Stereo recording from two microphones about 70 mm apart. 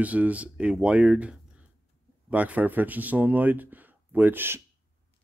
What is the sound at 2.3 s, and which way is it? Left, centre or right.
Speech, right.